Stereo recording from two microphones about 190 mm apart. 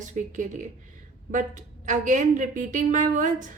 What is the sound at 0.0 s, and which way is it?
A woman's voice, 40° right (ahead or behind).